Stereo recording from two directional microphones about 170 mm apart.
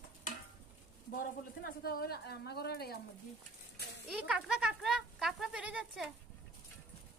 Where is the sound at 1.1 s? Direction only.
60° left (ahead or behind).